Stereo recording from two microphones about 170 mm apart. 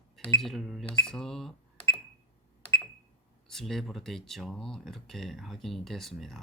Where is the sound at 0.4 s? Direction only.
Centre (ahead or behind).